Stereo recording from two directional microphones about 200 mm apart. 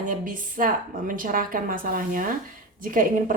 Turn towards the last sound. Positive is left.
turn(degrees=-45)  # may be behind; listen again after turning